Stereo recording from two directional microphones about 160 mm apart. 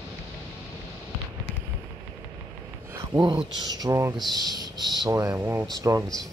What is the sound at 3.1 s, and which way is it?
Speech, 30° right (ahead or behind).